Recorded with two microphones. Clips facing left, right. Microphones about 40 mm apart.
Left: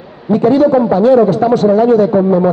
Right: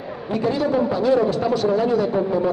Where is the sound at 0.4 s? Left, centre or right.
Left.